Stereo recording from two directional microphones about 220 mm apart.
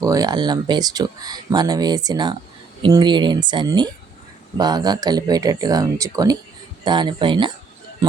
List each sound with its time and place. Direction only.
0.0 s speech: 15° right (ahead or behind)